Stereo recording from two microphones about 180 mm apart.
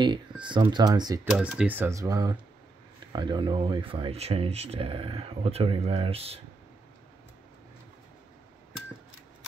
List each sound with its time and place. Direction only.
0.0 s speech: 25° right (ahead or behind)
1.2 s speech: 5° right (ahead or behind); by 6.4 s 35° right (ahead or behind)